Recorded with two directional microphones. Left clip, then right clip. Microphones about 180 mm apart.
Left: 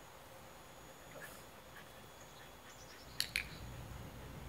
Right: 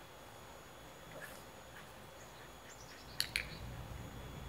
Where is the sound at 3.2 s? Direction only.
Centre (ahead or behind).